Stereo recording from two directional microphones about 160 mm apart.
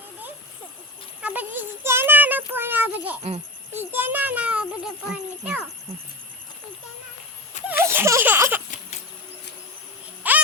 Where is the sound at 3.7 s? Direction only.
10° right (ahead or behind).